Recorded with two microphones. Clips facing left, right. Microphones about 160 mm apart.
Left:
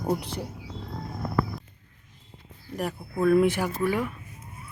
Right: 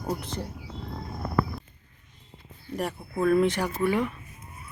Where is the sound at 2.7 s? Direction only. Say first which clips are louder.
Even; centre (ahead or behind).